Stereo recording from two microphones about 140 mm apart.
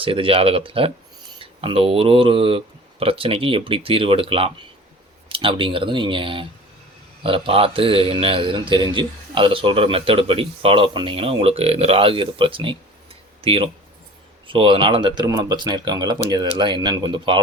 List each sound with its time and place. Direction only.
0.0 s a man's voice: 40° right (ahead or behind)